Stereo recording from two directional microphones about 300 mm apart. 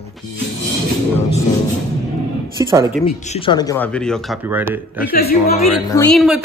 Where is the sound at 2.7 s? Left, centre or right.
Centre.